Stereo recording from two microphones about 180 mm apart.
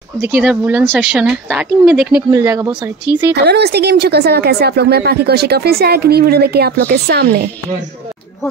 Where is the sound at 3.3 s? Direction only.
65° right (ahead or behind).